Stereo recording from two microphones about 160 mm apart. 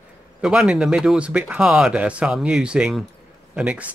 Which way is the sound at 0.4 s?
5° right (ahead or behind).